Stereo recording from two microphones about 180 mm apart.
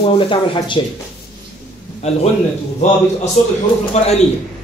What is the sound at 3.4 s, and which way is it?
Speech, 45° left (ahead or behind).